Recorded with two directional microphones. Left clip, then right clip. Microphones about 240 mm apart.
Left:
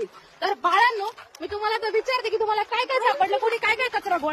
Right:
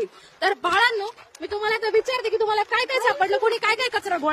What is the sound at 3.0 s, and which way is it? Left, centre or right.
Speech, centre.